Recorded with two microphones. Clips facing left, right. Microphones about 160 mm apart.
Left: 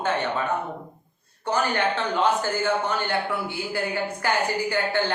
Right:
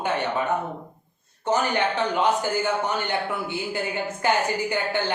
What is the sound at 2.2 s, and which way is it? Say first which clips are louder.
Speech: left 1 dB; 15° right (ahead or behind).